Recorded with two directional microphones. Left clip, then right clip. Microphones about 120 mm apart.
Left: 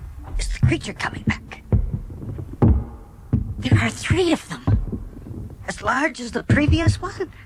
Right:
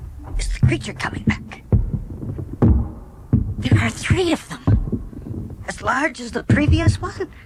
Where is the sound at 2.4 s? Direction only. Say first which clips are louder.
Right 4 dB; 10° left (ahead or behind).